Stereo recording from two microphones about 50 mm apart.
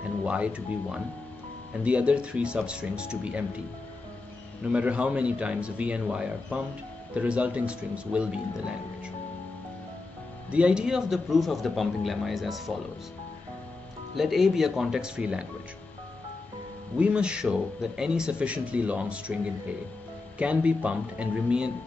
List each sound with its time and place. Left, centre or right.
0.2 s speech: right
4.6 s speech: right
10.5 s speech: right
10.8 s speech: centre
14.1 s speech: centre
16.9 s speech: right
20.3 s speech: right